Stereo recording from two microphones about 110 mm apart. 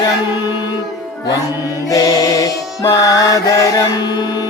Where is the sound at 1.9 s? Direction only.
30° left (ahead or behind).